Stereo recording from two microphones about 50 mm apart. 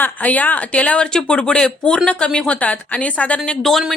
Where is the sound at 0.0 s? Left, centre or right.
Left.